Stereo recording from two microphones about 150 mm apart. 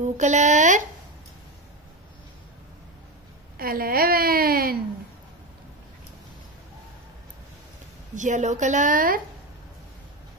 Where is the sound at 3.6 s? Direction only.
80° right.